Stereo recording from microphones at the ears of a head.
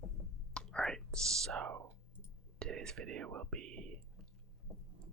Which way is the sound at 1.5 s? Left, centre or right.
Right.